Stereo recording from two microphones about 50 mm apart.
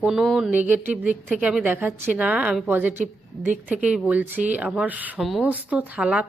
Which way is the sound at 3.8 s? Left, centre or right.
Centre.